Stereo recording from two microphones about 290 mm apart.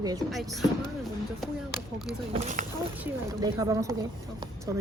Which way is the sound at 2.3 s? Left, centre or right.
Right.